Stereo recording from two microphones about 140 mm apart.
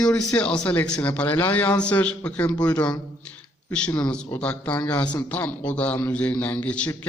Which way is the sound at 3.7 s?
5° left (ahead or behind).